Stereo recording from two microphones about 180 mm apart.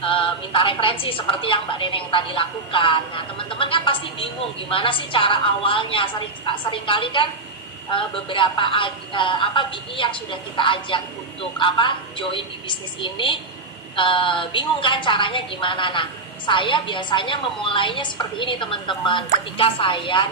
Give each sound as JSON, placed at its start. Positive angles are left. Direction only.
{"t": 0.0, "sound": "a woman's voice", "side_deg": 30}